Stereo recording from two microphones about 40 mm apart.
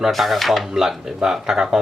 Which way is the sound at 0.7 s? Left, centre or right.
Centre.